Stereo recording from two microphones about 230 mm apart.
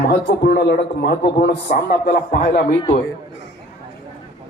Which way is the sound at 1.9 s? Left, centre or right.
Left.